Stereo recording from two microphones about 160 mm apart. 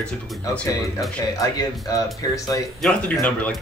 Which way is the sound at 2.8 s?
5° left (ahead or behind).